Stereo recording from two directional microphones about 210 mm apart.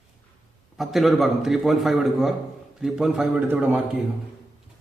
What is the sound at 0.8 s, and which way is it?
A man's voice, centre (ahead or behind).